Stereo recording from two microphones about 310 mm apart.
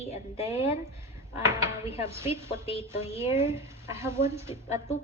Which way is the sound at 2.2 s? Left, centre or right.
Centre.